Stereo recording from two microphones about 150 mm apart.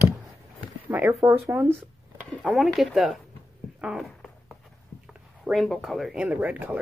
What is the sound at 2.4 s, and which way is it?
Speech, centre (ahead or behind).